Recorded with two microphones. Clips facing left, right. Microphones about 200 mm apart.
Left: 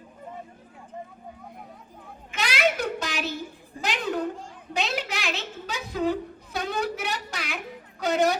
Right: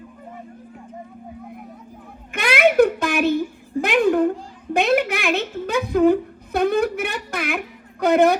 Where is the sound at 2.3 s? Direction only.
55° right (ahead or behind).